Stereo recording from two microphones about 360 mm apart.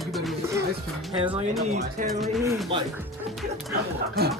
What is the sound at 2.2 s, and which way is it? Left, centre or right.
Speech, centre.